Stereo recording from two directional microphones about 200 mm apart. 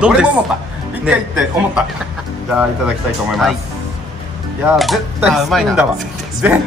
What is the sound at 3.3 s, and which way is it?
Speech, centre (ahead or behind).